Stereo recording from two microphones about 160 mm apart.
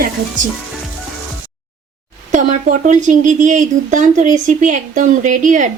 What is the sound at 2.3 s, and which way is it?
Speech, 50° right (ahead or behind).